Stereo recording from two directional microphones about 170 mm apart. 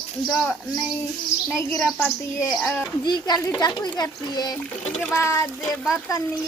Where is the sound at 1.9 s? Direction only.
10° left (ahead or behind).